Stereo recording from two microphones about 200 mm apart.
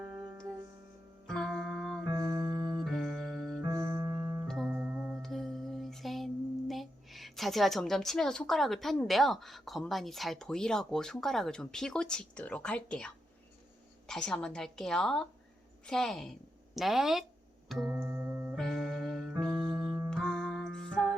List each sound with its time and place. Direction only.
0.0 s music: 20° right (ahead or behind)
1.3 s music: centre (ahead or behind)
2.1 s music: 15° right (ahead or behind)
2.8 s music: centre (ahead or behind)
3.7 s keyboard: 15° right (ahead or behind)
4.4 s music: centre (ahead or behind)
14.1 s a woman's voice: 5° left (ahead or behind)
17.7 s music: 5° right (ahead or behind)
18.5 s music: centre (ahead or behind)
19.8 s music: 15° right (ahead or behind)
20.1 s music: centre (ahead or behind)